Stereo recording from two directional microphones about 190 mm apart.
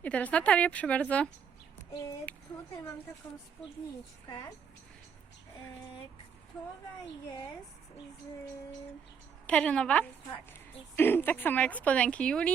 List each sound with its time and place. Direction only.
0.0 s speech: 5° left (ahead or behind)
2.0 s speech: 15° left (ahead or behind)
4.3 s speech: 20° left (ahead or behind)
7.3 s speech: 15° left (ahead or behind)
9.5 s a woman's voice: 5° left (ahead or behind)